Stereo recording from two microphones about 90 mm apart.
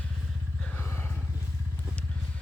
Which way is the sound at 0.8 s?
25° left (ahead or behind).